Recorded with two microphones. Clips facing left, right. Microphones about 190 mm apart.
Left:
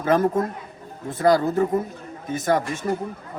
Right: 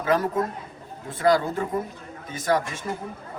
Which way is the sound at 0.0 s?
45° left (ahead or behind).